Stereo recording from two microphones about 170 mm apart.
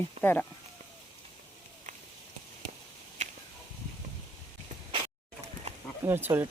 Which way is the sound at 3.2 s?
45° right (ahead or behind).